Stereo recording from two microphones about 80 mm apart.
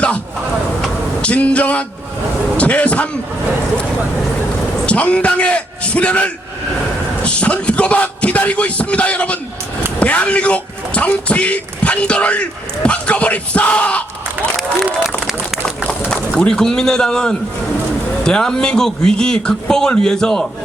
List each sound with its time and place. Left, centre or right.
1.2 s speech: centre
4.9 s speech: centre
15.9 s speech: centre